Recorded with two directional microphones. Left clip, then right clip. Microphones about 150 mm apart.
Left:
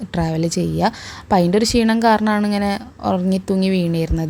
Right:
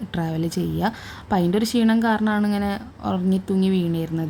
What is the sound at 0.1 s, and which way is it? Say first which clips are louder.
A woman's voice: left 6 dB; 30° left (ahead or behind).